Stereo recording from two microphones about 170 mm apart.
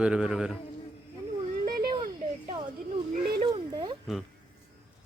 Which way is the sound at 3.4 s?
25° right (ahead or behind).